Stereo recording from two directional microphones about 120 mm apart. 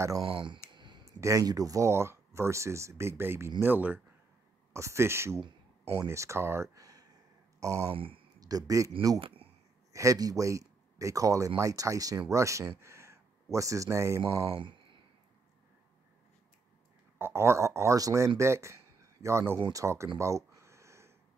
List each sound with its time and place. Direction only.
0.2 s speech: 45° right (ahead or behind)
0.7 s a sound: 40° right (ahead or behind)
1.0 s speech: 25° right (ahead or behind)
7.9 s speech: 50° right (ahead or behind)
8.4 s speech: 30° right (ahead or behind)
9.2 s a sound: 50° right (ahead or behind)
9.9 s speech: 30° right (ahead or behind)
14.2 s speech: 45° right (ahead or behind)
17.2 s speech: 20° right (ahead or behind)
20.2 s a sound: 25° right (ahead or behind)